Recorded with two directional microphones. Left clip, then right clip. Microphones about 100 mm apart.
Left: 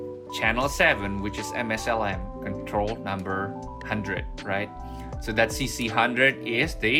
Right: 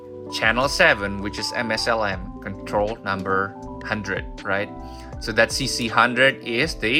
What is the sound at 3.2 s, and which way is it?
Speech, 50° right (ahead or behind).